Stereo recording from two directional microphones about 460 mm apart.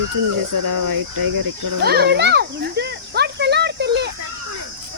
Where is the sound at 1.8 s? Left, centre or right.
Right.